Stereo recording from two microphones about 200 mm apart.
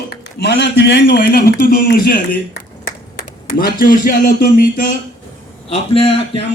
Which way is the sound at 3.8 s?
45° left (ahead or behind).